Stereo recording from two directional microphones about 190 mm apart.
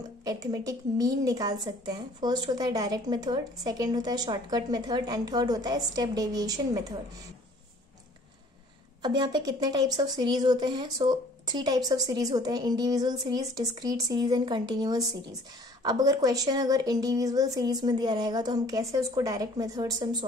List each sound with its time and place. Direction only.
0.2 s a woman's voice: 20° right (ahead or behind)
9.0 s a woman's voice: 20° right (ahead or behind)